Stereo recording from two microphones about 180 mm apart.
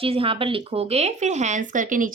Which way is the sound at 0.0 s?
30° right (ahead or behind).